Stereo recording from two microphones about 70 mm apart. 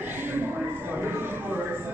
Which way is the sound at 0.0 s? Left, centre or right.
Right.